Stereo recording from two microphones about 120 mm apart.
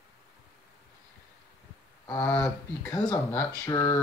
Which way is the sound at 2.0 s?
20° left (ahead or behind).